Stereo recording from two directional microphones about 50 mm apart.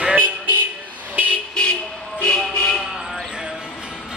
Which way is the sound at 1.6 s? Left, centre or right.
Centre.